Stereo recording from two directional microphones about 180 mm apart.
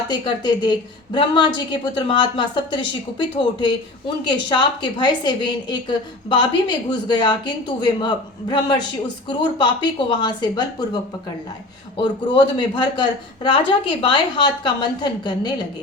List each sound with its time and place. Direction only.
0.1 s speech: 25° left (ahead or behind)
11.9 s speech: 25° left (ahead or behind)